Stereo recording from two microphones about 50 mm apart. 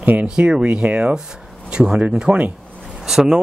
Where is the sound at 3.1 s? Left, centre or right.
Centre.